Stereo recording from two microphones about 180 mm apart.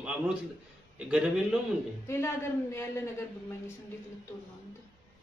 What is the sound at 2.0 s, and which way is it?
Speech, 15° left (ahead or behind).